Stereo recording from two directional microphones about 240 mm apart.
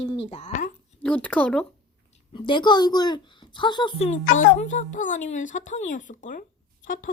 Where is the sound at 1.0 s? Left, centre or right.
Centre.